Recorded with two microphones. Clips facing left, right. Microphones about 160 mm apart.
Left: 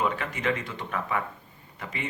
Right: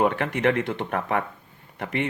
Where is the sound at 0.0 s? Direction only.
60° right (ahead or behind).